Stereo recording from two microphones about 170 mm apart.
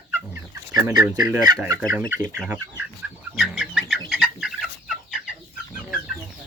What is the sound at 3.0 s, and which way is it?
Chicken, 5° right (ahead or behind).